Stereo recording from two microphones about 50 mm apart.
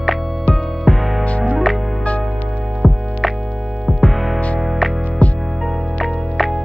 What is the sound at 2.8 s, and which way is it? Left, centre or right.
Music, centre.